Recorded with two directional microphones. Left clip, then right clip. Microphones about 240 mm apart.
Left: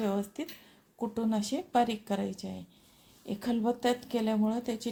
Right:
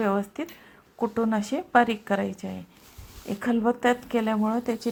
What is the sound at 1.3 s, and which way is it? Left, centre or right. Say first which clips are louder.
A woman's voice: right 7 dB; centre.